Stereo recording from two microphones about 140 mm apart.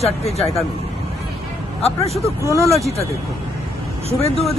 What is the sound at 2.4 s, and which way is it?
Speech, 20° right (ahead or behind).